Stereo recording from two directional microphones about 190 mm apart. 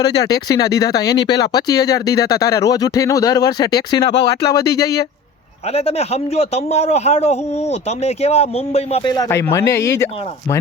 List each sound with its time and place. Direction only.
0.0 s speech: 20° left (ahead or behind)
5.6 s a man's voice: 30° left (ahead or behind); by 10.1 s 15° left (ahead or behind)